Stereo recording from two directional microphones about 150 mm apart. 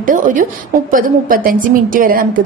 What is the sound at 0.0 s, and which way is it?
A woman's voice, 60° right (ahead or behind).